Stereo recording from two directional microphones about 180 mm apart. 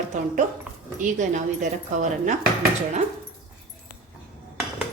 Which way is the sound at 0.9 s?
45° right (ahead or behind).